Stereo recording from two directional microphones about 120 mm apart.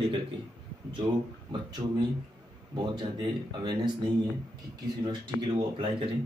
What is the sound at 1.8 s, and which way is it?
A man's voice, 30° right (ahead or behind).